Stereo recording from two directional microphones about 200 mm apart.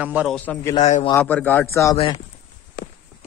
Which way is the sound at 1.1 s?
10° left (ahead or behind).